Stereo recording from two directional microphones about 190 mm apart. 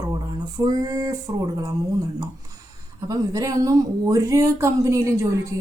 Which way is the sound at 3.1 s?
20° right (ahead or behind).